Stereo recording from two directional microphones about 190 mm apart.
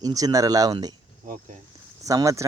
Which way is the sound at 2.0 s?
15° right (ahead or behind).